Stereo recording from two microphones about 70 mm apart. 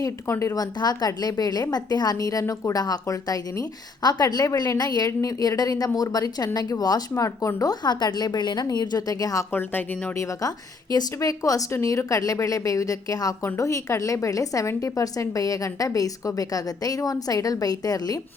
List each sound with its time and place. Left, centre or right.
0.0 s a woman's voice: left
0.5 s a woman's voice: left
2.4 s a woman's voice: left
2.7 s a woman's voice: left
7.2 s a woman's voice: left
7.7 s a woman's voice: left
9.5 s speech: left
10.2 s a woman's voice: left